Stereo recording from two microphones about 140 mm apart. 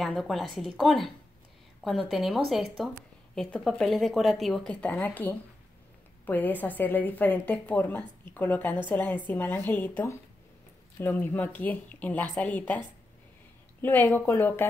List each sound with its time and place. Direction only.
0.0 s a woman's voice: centre (ahead or behind)